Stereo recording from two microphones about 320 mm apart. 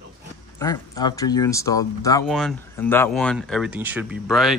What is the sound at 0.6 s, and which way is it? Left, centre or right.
Speech, centre.